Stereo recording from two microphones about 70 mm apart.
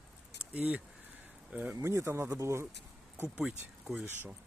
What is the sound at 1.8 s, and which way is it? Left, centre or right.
Speech, right.